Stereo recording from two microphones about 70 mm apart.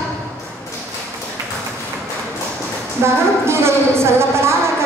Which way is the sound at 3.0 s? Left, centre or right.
Right.